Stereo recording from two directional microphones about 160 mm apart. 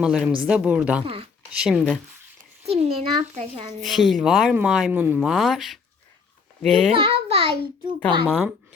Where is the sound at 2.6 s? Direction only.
40° right (ahead or behind).